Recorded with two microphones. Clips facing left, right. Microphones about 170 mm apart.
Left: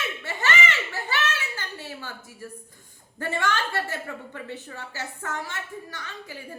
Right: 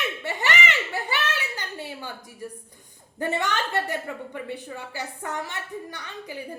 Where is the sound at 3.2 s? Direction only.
20° right (ahead or behind).